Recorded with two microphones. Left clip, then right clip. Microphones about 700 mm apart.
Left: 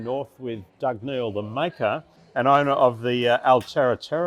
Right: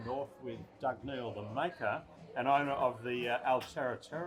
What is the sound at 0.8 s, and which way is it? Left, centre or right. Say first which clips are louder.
A man's voice: left 12 dB; left.